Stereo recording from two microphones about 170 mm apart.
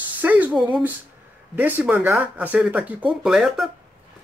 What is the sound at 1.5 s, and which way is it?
Speech, 10° right (ahead or behind).